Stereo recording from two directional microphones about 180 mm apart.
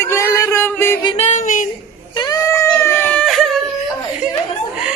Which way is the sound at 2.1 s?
20° left (ahead or behind).